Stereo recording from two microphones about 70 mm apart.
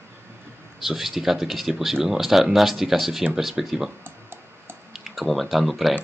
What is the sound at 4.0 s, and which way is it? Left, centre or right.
Clicking, right.